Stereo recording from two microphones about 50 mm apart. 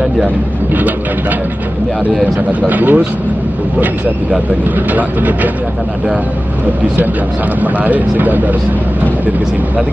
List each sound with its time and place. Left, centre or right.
2.6 s speech: right
4.9 s speech: right
7.6 s speech: right